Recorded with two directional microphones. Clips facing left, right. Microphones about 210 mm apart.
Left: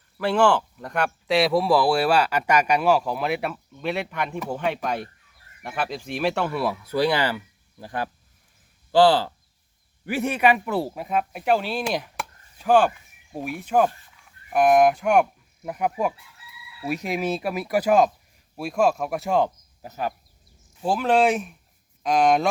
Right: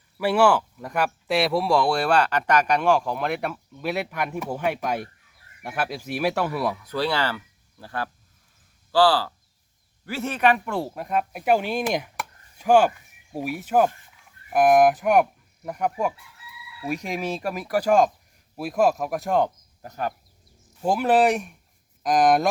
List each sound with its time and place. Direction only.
0.2 s speech: 10° right (ahead or behind)
6.9 s speech: 15° left (ahead or behind)
18.5 s speech: 5° right (ahead or behind)
20.8 s speech: 10° right (ahead or behind)